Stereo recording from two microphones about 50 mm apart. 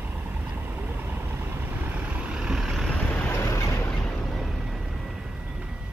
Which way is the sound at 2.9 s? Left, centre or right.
Centre.